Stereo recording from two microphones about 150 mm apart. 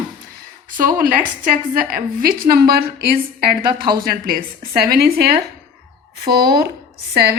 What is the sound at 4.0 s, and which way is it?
A woman's voice, 75° right (ahead or behind).